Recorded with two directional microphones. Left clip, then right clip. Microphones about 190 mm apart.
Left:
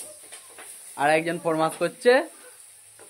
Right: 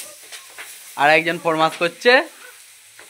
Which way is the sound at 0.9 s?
20° right (ahead or behind).